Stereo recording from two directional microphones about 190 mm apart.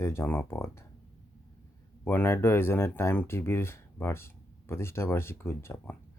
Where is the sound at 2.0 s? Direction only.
10° left (ahead or behind).